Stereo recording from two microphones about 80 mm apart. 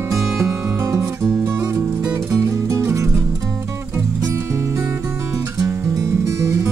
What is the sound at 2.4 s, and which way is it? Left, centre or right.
Music, right.